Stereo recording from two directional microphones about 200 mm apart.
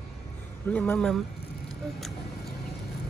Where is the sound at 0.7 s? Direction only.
5° left (ahead or behind).